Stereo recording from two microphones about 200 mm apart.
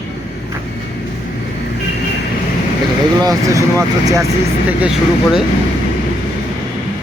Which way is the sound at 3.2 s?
15° right (ahead or behind).